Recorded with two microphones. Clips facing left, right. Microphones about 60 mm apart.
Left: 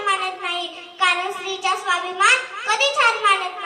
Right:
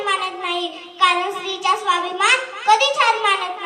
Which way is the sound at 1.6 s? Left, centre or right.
Left.